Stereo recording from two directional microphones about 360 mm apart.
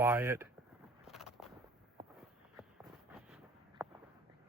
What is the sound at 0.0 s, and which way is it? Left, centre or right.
Speech, centre.